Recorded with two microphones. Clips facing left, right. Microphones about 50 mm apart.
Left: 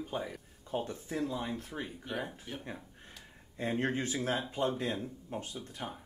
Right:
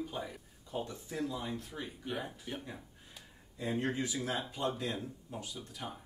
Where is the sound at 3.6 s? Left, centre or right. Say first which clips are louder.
Left 2 dB; left.